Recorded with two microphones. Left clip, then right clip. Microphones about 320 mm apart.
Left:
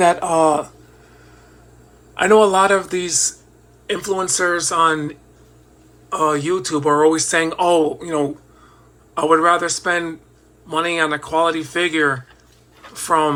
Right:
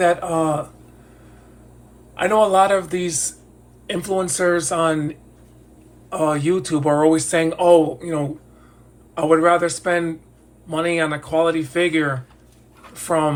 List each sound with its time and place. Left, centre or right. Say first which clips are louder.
0.0 s a man's voice: left 4 dB; centre
2.1 s a man's voice: left 2 dB; centre